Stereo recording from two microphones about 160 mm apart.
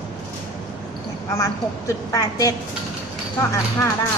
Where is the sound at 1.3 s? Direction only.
20° left (ahead or behind).